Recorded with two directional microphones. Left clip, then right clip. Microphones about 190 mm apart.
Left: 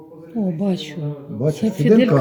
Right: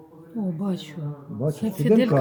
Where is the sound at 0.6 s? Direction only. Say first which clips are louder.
Left 7 dB; 60° right (ahead or behind).